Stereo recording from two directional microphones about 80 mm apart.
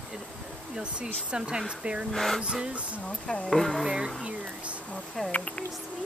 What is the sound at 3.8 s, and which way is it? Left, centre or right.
Speech, centre.